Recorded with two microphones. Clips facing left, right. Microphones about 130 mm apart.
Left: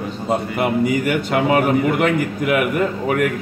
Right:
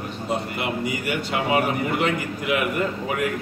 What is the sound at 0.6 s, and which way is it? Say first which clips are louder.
A man's voice: left 8 dB; 50° left (ahead or behind).